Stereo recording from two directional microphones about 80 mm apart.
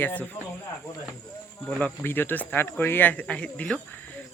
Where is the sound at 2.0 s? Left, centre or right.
Left.